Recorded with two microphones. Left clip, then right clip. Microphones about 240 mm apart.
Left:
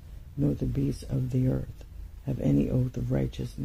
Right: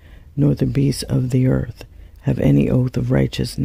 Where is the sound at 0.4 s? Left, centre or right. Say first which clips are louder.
Right 11 dB; right.